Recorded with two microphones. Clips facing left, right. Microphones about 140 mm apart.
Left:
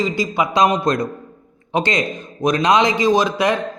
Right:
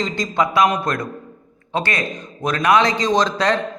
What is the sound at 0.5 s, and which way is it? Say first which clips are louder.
A man's voice: left 4 dB; 20° left (ahead or behind).